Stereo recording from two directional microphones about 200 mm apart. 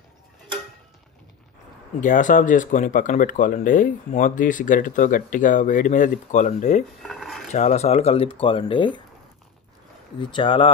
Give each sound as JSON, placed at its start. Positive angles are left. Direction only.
{"t": 2.0, "sound": "speech", "side_deg": 40}
{"t": 7.0, "sound": "a sound", "side_deg": 0}
{"t": 7.5, "sound": "speech", "side_deg": 35}
{"t": 10.3, "sound": "speech", "side_deg": 25}